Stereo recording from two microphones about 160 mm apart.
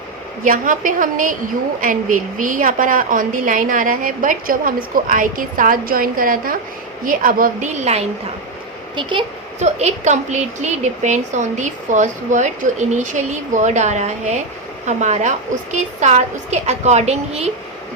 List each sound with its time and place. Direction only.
0.4 s a woman's voice: 55° right (ahead or behind)
9.0 s speech: 30° right (ahead or behind)
9.6 s a woman's voice: 45° right (ahead or behind)